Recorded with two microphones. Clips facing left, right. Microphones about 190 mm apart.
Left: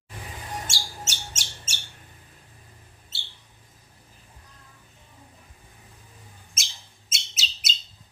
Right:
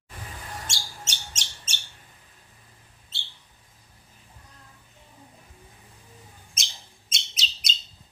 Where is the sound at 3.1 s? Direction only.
5° left (ahead or behind).